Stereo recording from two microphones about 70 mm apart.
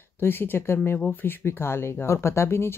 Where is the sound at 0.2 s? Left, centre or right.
Left.